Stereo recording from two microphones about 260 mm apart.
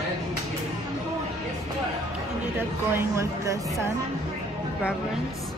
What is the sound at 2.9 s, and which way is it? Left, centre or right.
Speech, centre.